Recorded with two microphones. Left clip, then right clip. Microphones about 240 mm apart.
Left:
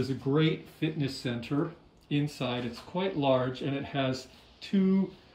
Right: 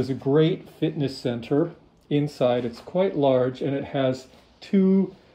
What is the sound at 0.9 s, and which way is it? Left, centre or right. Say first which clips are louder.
Speech: right 7 dB; centre.